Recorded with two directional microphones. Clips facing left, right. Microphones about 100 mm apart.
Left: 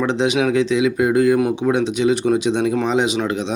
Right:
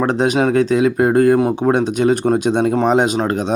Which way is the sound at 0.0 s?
45° right (ahead or behind).